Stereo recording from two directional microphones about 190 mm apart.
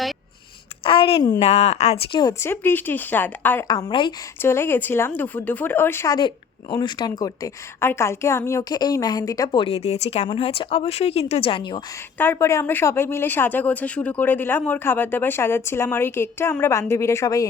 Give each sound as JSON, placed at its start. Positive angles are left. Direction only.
{"t": 0.9, "sound": "a sound", "side_deg": 30}
{"t": 1.4, "sound": "speech", "side_deg": 35}
{"t": 2.1, "sound": "speech", "side_deg": 15}
{"t": 3.7, "sound": "speech", "side_deg": 20}
{"t": 4.4, "sound": "speech", "side_deg": 10}
{"t": 12.1, "sound": "speech", "side_deg": 10}